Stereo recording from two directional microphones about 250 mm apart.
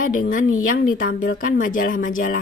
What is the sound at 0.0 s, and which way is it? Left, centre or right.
Speech, left.